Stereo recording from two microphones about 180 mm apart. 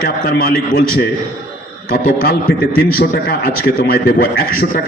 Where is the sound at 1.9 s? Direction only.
55° left (ahead or behind).